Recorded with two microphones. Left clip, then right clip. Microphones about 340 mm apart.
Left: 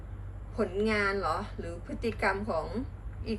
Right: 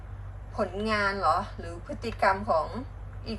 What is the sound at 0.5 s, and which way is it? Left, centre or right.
A woman's voice, centre.